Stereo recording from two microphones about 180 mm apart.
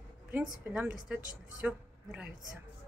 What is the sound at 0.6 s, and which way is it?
A woman's voice, 5° right (ahead or behind).